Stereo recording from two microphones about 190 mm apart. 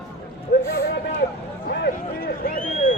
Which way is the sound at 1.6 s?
55° left (ahead or behind).